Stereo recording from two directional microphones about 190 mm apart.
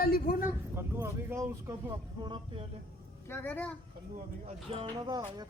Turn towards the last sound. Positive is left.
turn(degrees=-20)  # may be behind; listen again after turning